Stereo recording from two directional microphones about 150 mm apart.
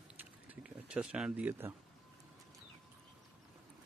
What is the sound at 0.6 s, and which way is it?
Speech, 5° right (ahead or behind).